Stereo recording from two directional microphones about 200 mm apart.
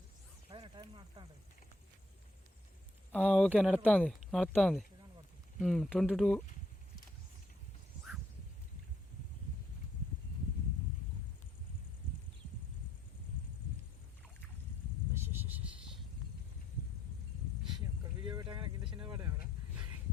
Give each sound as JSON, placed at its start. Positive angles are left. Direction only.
{"t": 0.5, "sound": "speech", "side_deg": -25}
{"t": 3.1, "sound": "speech", "side_deg": 5}
{"t": 15.1, "sound": "a sound", "side_deg": -10}
{"t": 17.7, "sound": "vehicle", "side_deg": -25}